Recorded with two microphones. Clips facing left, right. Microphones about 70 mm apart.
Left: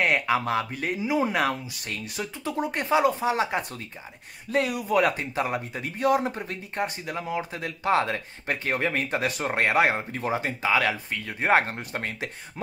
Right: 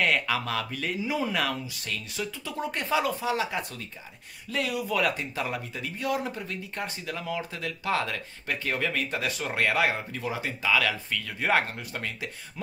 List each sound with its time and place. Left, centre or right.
0.0 s speech: left